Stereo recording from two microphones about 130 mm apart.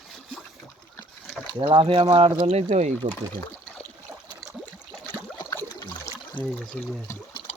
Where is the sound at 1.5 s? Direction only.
40° right (ahead or behind).